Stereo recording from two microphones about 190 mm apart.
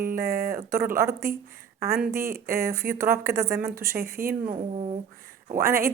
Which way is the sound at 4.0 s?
50° right (ahead or behind).